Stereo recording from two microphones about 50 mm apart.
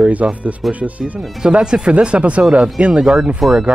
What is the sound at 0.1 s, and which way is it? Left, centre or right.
Speech, right.